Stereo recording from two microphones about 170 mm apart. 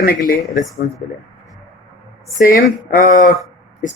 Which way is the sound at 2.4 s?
55° left (ahead or behind).